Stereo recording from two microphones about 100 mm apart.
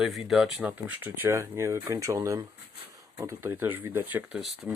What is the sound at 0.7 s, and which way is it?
Speech, 20° right (ahead or behind).